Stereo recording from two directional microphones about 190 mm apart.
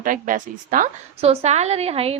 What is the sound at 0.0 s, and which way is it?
A woman's voice, 45° right (ahead or behind).